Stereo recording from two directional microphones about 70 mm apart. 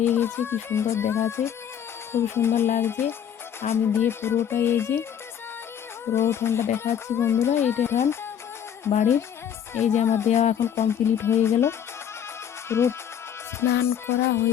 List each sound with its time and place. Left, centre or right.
0.0 s speech: left
6.1 s speech: left